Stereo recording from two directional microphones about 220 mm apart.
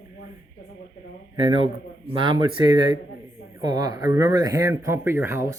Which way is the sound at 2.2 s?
20° right (ahead or behind).